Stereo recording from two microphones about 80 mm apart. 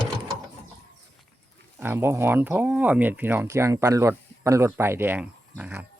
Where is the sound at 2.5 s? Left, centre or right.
Centre.